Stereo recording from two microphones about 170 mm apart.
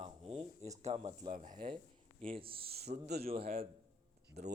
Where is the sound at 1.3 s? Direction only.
50° right (ahead or behind).